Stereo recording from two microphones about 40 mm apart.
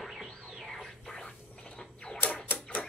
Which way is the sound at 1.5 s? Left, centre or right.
Left.